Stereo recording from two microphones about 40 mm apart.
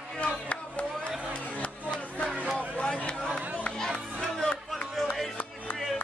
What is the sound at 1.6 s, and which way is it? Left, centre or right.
Music, left.